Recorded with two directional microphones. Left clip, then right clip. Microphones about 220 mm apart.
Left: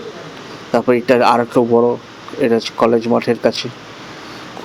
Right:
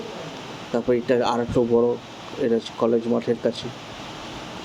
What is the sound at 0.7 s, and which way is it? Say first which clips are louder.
Speech: left 8 dB; 10° left (ahead or behind).